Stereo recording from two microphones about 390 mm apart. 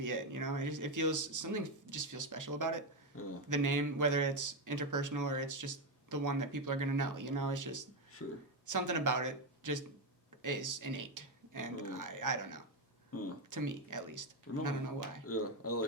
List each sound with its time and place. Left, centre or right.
0.0 s speech: right
3.1 s speech: left
3.5 s speech: right
8.2 s speech: left
8.6 s speech: right
13.1 s speech: left
13.5 s speech: right
15.3 s speech: left